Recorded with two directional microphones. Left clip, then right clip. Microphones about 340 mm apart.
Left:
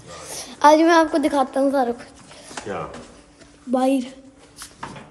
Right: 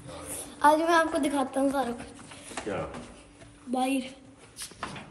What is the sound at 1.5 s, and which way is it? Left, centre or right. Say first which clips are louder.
Speech: left 8 dB; centre.